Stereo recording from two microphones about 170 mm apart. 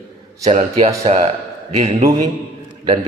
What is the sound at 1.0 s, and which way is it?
Speech, 35° right (ahead or behind).